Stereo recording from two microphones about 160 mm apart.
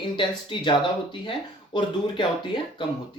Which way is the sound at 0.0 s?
30° left (ahead or behind).